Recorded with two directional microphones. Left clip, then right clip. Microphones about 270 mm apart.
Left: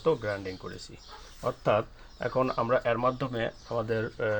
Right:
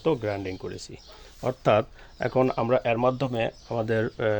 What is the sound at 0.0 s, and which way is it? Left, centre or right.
Speech, right.